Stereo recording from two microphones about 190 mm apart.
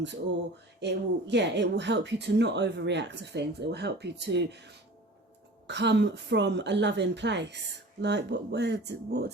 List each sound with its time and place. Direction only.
0.8 s speech: 65° right (ahead or behind)